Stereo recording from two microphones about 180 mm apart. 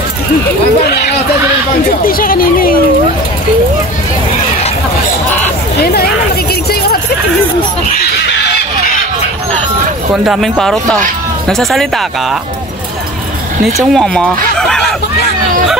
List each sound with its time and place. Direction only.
1.9 s speech: 50° left (ahead or behind)
5.8 s speech: 60° left (ahead or behind)
6.7 s a sound: 60° left (ahead or behind)
10.1 s speech: 5° right (ahead or behind)
13.7 s speech: centre (ahead or behind)
14.6 s a sound: 5° left (ahead or behind)